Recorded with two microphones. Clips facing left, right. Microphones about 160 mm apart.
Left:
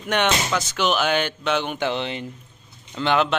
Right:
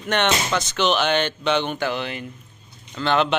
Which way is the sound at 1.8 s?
25° left (ahead or behind).